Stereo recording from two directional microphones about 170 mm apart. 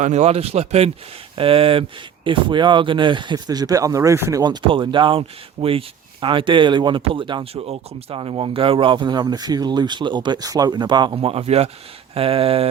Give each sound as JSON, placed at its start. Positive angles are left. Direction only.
{"t": 0.0, "sound": "speech", "side_deg": -40}